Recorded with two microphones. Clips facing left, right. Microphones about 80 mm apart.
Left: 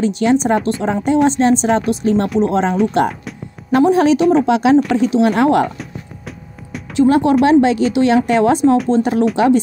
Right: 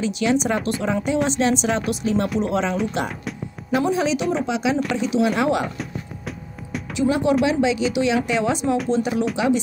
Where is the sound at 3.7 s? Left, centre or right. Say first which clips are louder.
Left 9 dB; left.